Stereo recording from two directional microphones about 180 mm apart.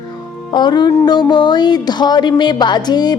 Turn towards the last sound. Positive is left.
turn(degrees=25)  # may be behind; listen again after turning